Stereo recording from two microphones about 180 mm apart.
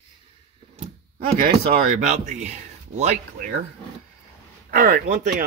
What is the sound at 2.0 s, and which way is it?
Speech, 40° right (ahead or behind).